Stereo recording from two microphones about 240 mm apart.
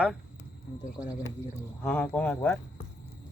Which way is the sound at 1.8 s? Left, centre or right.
Centre.